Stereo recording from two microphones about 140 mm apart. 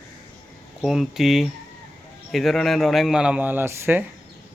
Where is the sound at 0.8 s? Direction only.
Centre (ahead or behind).